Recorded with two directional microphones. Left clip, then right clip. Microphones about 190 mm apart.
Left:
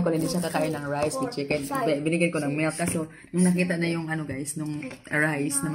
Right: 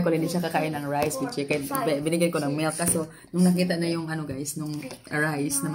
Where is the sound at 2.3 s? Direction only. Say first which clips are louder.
Even; 20° left (ahead or behind).